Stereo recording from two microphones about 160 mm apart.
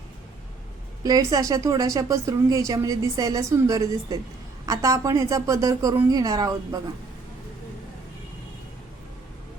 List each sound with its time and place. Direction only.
1.0 s speech: 25° right (ahead or behind)